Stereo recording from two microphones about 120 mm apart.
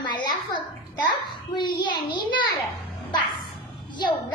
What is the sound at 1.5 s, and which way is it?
Speech, 40° left (ahead or behind).